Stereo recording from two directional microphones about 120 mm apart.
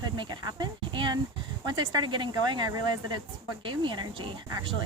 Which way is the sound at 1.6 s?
40° right (ahead or behind).